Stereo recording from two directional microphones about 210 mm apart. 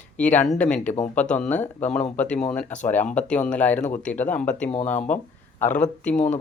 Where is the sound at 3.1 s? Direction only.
5° left (ahead or behind).